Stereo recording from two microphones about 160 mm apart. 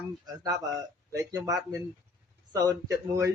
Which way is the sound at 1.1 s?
20° right (ahead or behind).